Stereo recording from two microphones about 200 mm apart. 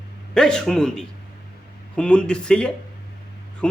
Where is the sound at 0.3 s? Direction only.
5° left (ahead or behind).